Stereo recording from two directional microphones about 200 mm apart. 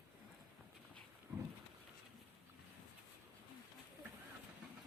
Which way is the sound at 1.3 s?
5° right (ahead or behind).